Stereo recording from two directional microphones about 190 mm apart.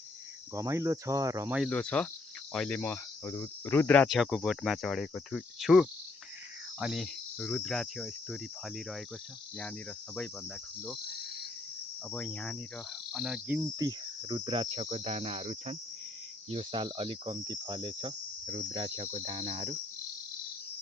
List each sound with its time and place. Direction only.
0.5 s speech: 15° right (ahead or behind)
1.7 s speech: 5° left (ahead or behind)
10.8 s cricket: centre (ahead or behind)
12.1 s speech: 5° left (ahead or behind)
13.7 s cricket: 20° right (ahead or behind)